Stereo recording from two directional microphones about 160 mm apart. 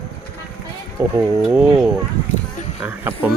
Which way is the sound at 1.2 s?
5° right (ahead or behind).